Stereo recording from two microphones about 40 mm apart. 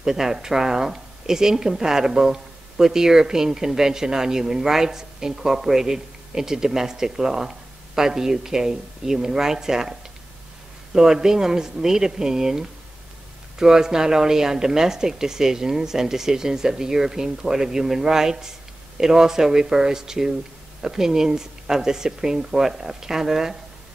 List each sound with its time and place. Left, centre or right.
0.0 s speech: centre